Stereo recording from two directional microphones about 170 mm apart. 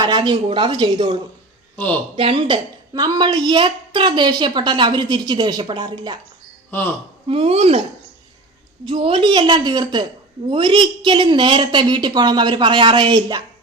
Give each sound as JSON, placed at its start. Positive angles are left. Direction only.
{"t": 0.0, "sound": "a woman's voice", "side_deg": -25}
{"t": 1.7, "sound": "speech", "side_deg": 10}
{"t": 2.1, "sound": "a woman's voice", "side_deg": -30}
{"t": 7.3, "sound": "speech", "side_deg": -35}
{"t": 8.8, "sound": "a woman's voice", "side_deg": -30}